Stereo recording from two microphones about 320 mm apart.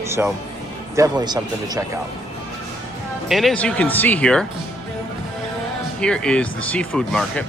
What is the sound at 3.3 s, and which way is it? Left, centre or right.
Speech, centre.